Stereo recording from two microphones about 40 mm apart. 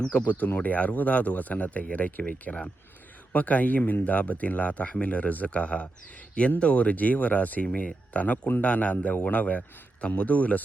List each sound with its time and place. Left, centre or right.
0.3 s speech: left